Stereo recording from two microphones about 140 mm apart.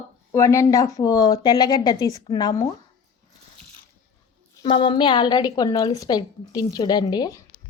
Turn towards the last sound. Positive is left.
turn(degrees=30)  # may be behind; listen again after turning